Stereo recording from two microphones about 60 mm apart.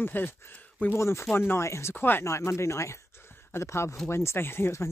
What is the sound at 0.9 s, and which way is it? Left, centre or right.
Speech, left.